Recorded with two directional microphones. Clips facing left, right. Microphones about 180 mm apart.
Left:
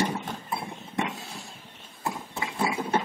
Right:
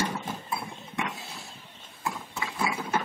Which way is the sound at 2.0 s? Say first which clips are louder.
Left 2 dB; 25° left (ahead or behind).